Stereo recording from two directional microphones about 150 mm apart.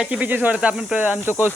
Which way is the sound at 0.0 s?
10° right (ahead or behind).